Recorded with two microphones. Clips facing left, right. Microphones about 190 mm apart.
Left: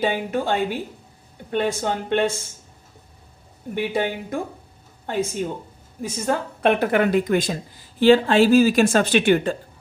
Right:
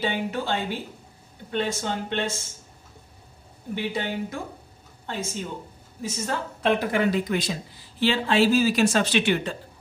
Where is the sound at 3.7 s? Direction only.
50° left (ahead or behind).